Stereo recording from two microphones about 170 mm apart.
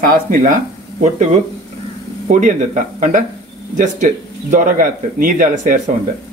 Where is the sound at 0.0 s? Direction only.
50° right (ahead or behind).